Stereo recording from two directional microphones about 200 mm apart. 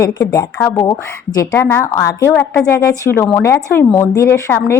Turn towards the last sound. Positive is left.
turn(degrees=10)  # may be behind; listen again after turning